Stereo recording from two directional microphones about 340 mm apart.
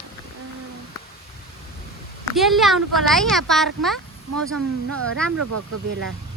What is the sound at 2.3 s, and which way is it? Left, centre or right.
Speech, centre.